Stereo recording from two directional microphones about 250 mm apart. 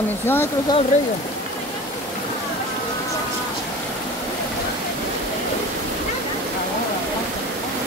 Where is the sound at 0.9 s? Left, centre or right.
Left.